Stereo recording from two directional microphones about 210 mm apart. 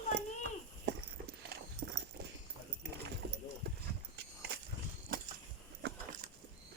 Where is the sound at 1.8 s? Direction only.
50° right (ahead or behind).